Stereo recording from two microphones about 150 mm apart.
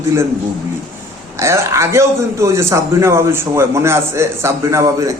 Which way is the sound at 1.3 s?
20° right (ahead or behind).